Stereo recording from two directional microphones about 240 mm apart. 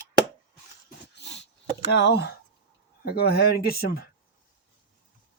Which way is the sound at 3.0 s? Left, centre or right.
Left.